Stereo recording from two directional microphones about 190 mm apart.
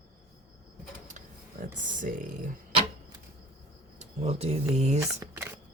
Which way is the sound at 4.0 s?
35° right (ahead or behind).